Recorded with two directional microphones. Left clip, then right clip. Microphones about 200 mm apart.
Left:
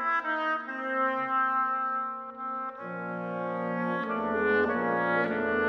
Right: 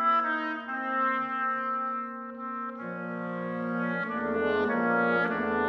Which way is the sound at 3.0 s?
20° right (ahead or behind).